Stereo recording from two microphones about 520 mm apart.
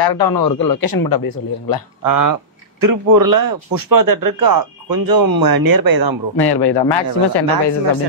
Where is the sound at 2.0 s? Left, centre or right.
Right.